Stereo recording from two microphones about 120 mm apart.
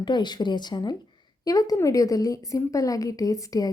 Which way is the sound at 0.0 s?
40° left (ahead or behind).